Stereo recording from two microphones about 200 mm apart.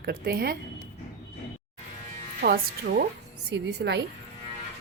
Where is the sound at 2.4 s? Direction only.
50° right (ahead or behind).